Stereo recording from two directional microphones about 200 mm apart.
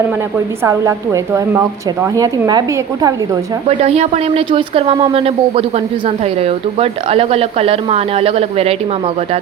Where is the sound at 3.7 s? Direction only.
30° right (ahead or behind).